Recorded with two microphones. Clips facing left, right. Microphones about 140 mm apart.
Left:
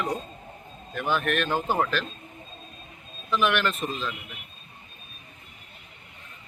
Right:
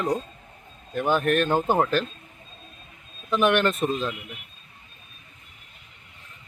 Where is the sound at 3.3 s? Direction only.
45° right (ahead or behind).